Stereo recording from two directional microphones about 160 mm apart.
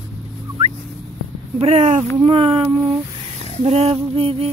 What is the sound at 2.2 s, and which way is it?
Female singing, 35° right (ahead or behind).